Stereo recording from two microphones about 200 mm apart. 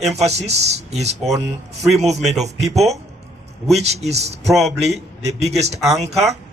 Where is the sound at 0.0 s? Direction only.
35° right (ahead or behind).